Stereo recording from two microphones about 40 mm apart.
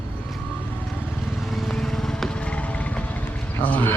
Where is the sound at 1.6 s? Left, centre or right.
Centre.